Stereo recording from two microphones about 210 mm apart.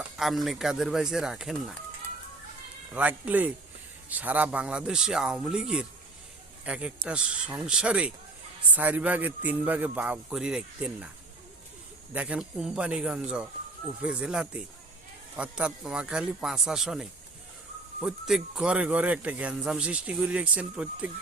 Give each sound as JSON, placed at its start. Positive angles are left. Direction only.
{"t": 0.2, "sound": "a man's voice", "side_deg": 0}
{"t": 2.9, "sound": "a man's voice", "side_deg": -5}
{"t": 12.1, "sound": "a man's voice", "side_deg": -5}